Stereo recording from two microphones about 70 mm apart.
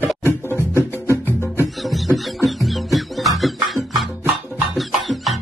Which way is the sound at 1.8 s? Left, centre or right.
Centre.